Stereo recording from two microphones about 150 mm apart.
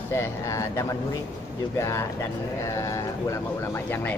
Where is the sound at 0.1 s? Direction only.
20° left (ahead or behind).